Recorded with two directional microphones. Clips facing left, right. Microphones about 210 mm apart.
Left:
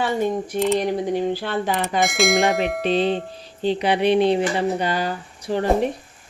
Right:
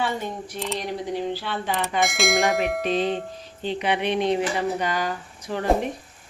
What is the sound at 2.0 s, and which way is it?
Bell, centre (ahead or behind).